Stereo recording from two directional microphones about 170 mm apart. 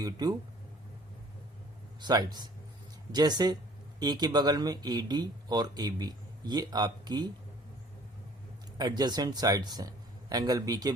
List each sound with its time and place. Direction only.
0.0 s speech: 20° right (ahead or behind)
2.0 s speech: 25° right (ahead or behind)
8.8 s speech: 25° right (ahead or behind)